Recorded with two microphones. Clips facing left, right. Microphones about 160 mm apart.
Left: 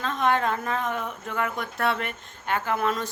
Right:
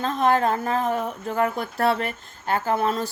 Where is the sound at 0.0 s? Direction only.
35° right (ahead or behind).